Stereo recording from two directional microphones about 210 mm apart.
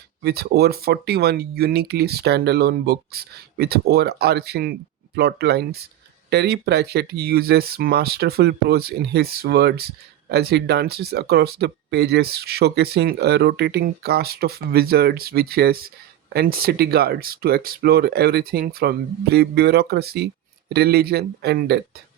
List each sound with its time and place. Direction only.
0.2 s speech: 50° right (ahead or behind)